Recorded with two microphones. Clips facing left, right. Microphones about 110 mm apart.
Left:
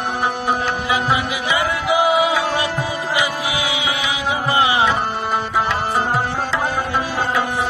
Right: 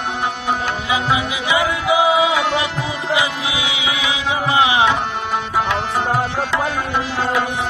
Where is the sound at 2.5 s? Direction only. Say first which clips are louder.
Even; 45° left (ahead or behind).